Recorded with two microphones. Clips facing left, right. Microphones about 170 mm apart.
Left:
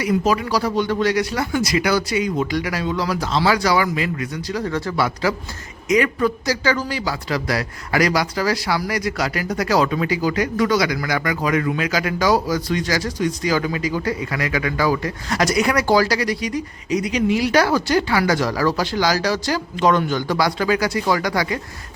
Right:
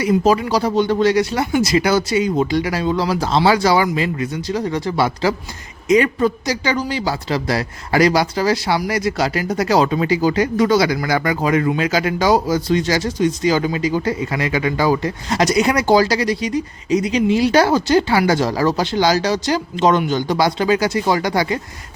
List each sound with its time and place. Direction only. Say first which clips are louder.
0.0 s speech: right 4 dB; 25° right (ahead or behind)